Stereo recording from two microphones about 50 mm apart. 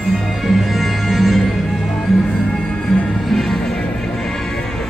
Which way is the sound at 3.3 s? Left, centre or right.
Centre.